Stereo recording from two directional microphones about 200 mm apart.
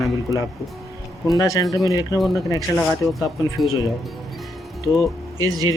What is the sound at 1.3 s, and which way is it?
Speech, 15° left (ahead or behind).